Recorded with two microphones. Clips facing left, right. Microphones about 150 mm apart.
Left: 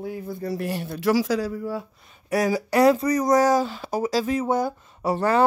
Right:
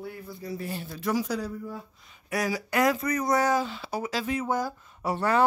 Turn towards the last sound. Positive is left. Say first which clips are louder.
# left 4 dB
turn(degrees=35)  # may be behind; listen again after turning